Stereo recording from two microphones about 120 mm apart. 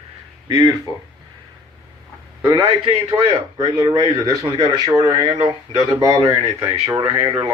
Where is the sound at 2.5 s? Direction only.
45° right (ahead or behind).